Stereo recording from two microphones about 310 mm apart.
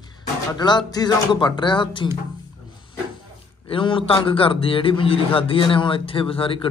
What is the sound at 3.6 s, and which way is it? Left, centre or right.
A man's voice, centre.